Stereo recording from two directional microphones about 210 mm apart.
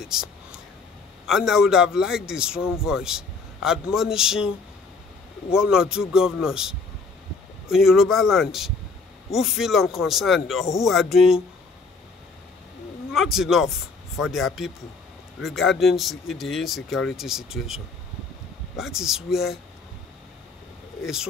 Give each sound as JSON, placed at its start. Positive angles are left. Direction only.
{"t": 0.0, "sound": "whispering", "side_deg": -5}
{"t": 1.2, "sound": "a man's voice", "side_deg": 0}
{"t": 5.5, "sound": "a man's voice", "side_deg": -5}
{"t": 13.1, "sound": "a man's voice", "side_deg": 0}
{"t": 21.0, "sound": "a man's voice", "side_deg": -5}